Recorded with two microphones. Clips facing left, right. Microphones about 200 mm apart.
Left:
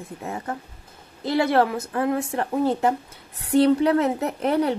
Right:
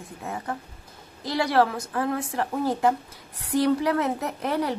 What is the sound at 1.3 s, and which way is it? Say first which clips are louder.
Speech: left 2 dB; 20° left (ahead or behind).